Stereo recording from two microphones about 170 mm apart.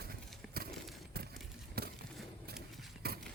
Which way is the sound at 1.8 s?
65° right (ahead or behind).